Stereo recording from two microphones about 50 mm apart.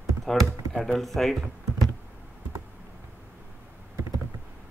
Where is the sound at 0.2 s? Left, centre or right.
Centre.